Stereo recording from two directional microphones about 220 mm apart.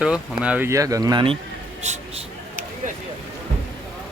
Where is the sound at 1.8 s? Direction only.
30° right (ahead or behind).